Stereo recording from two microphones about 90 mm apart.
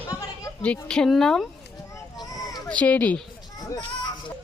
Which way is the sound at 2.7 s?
15° left (ahead or behind).